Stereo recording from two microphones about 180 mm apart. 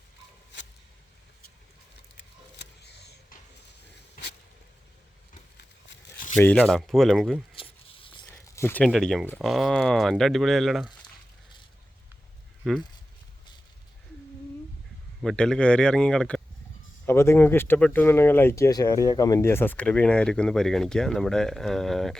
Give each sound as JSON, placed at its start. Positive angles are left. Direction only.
{"t": 2.1, "sound": "a sound", "side_deg": 70}
{"t": 6.3, "sound": "speech", "side_deg": 10}
{"t": 7.5, "sound": "zipper", "side_deg": 30}
{"t": 8.3, "sound": "speech", "side_deg": 15}
{"t": 12.6, "sound": "speech", "side_deg": 0}
{"t": 15.2, "sound": "speech", "side_deg": 5}